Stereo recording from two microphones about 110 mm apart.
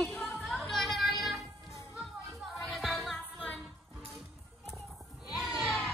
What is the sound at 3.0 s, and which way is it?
Music, 10° left (ahead or behind).